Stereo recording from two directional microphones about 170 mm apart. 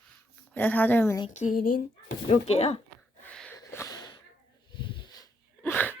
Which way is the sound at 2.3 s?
35° left (ahead or behind).